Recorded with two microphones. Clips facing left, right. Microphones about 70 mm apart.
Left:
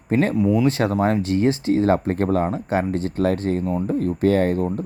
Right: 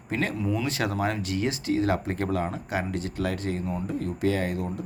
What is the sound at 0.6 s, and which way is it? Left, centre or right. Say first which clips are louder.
Speech: left 8 dB; left.